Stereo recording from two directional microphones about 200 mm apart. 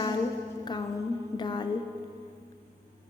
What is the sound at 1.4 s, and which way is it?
Speech, 20° left (ahead or behind).